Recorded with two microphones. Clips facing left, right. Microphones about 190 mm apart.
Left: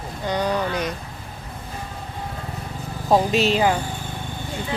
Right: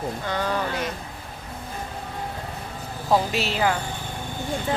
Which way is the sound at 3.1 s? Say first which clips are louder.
Left 5 dB; 20° left (ahead or behind).